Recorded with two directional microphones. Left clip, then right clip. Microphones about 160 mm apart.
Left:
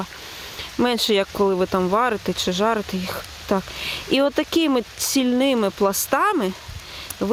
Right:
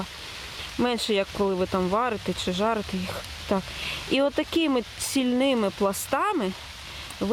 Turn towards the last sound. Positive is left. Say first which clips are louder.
# left 5 dB
turn(degrees=35)  # may be behind; listen again after turning